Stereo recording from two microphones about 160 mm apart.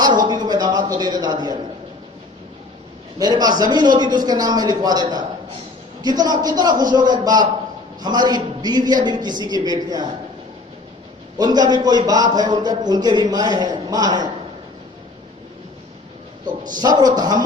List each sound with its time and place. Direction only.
0.0 s speech: 25° right (ahead or behind)
3.2 s a man's voice: 25° right (ahead or behind)
11.3 s a man's voice: 25° right (ahead or behind)
16.5 s a man's voice: 25° right (ahead or behind)